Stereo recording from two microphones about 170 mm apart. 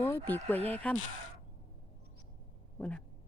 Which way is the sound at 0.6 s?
35° right (ahead or behind).